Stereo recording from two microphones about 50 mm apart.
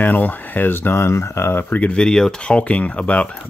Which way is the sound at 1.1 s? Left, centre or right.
Left.